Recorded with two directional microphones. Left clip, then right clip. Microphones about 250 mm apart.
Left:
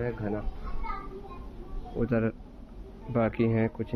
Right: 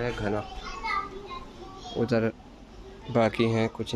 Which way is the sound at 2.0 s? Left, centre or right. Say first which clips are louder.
Right 3 dB; right.